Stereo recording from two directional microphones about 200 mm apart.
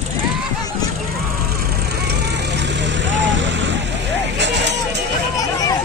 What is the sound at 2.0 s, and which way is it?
Vehicle, 60° right (ahead or behind).